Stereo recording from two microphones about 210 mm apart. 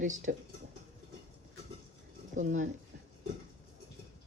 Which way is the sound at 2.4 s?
40° right (ahead or behind).